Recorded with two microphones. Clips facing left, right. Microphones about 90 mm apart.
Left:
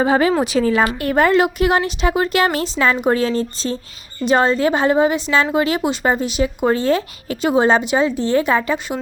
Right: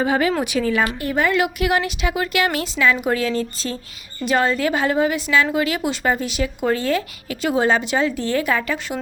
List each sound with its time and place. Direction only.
0.0 s a woman's voice: 30° left (ahead or behind)
1.0 s a woman's voice: 45° left (ahead or behind)
1.3 s a woman's voice: 35° left (ahead or behind)